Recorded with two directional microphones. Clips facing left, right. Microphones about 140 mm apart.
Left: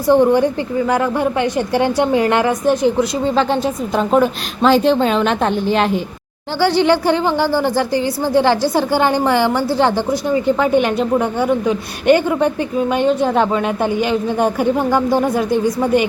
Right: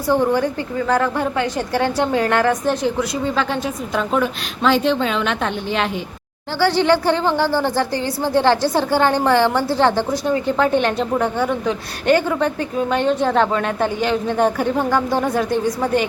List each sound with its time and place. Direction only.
0.1 s a woman's voice: 20° left (ahead or behind)
3.0 s a woman's voice: 30° left (ahead or behind)
4.1 s a woman's voice: 40° left (ahead or behind)
6.6 s a woman's voice: 15° left (ahead or behind)